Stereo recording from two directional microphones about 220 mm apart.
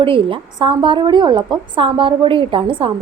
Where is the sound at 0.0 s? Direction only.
25° right (ahead or behind).